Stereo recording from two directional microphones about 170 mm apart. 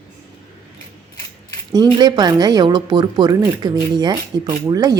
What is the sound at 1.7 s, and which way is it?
Speech, 25° right (ahead or behind).